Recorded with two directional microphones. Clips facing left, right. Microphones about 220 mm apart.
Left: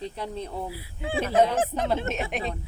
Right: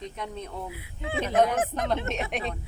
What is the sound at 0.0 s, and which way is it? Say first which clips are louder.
Speech: left 3 dB; 30° left (ahead or behind).